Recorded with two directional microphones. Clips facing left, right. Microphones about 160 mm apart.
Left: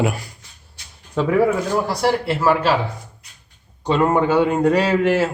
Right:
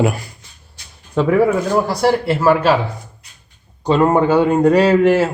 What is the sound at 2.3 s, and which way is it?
Speech, 45° right (ahead or behind).